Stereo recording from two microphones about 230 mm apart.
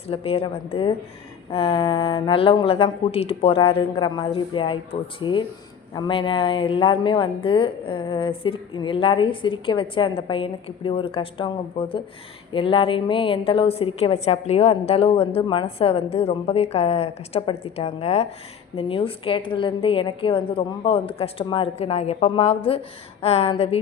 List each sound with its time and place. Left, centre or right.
0.1 s a woman's voice: left